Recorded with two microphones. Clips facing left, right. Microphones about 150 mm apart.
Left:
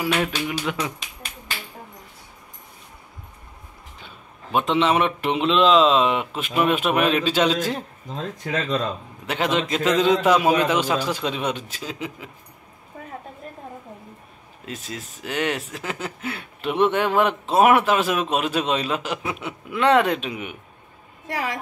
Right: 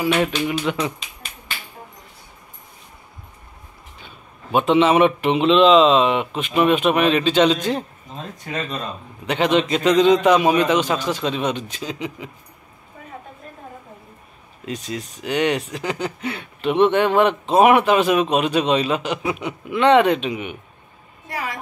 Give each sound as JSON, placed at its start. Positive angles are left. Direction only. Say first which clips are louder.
{"t": 0.0, "sound": "speech", "louder": "right 4 dB", "side_deg": 0}
{"t": 4.5, "sound": "speech", "louder": "right 4 dB", "side_deg": -5}
{"t": 9.2, "sound": "speech", "louder": "right 5 dB", "side_deg": 5}
{"t": 14.7, "sound": "speech", "louder": "right 6 dB", "side_deg": 5}
{"t": 21.3, "sound": "a sound", "louder": "left 1 dB", "side_deg": 85}